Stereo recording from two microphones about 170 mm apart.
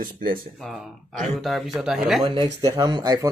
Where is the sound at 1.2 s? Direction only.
Centre (ahead or behind).